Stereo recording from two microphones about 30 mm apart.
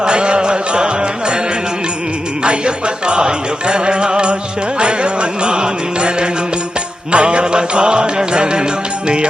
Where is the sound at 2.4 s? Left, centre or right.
Right.